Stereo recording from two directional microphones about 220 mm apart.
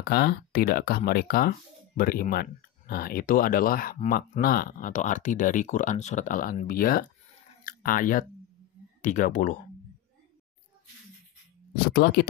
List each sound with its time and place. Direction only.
0.0 s speech: 45° left (ahead or behind)
11.9 s speech: 50° left (ahead or behind)